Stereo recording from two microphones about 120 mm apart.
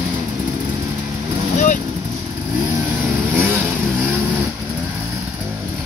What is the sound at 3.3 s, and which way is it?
Vehicle, 20° right (ahead or behind).